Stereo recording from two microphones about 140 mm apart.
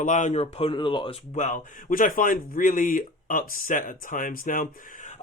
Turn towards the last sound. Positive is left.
turn(degrees=85)